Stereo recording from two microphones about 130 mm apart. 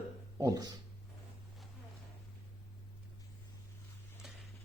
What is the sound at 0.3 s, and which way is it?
Speech, 25° right (ahead or behind).